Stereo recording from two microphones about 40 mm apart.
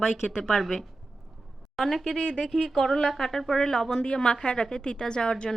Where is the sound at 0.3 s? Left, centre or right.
Centre.